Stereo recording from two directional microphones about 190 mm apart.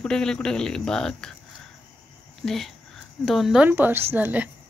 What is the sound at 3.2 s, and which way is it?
A woman's voice, centre (ahead or behind).